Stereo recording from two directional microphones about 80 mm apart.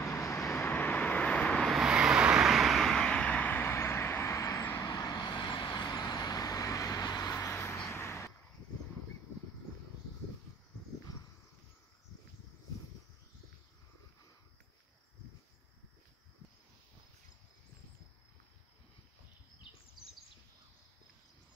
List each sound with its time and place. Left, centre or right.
0.0 s vehicle: left
0.6 s vehicle: left
1.7 s vehicle: centre; by 4.6 s left
4.9 s vehicle: left
7.5 s vehicle: left